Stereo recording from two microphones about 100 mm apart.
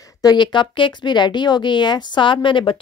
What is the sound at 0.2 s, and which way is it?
Speech, 45° left (ahead or behind).